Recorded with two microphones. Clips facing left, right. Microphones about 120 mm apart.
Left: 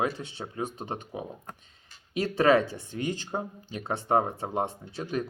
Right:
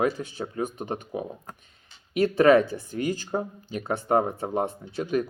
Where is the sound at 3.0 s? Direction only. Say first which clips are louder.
Right 4 dB; 25° left (ahead or behind).